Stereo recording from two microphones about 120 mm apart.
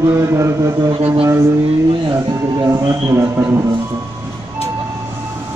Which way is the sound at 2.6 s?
25° right (ahead or behind).